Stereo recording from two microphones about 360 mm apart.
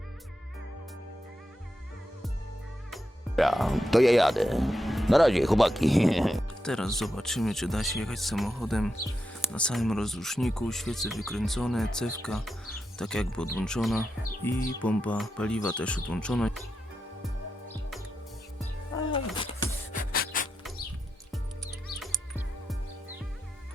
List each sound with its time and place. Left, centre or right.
2.9 s speech: centre
17.2 s music: centre
19.9 s music: left
21.9 s music: centre